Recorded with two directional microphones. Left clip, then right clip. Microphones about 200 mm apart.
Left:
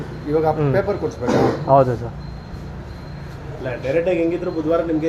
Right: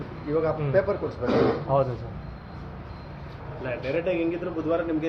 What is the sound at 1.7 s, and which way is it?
Speech, 60° left (ahead or behind).